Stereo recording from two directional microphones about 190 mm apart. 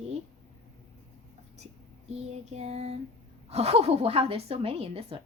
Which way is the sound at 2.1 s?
35° right (ahead or behind).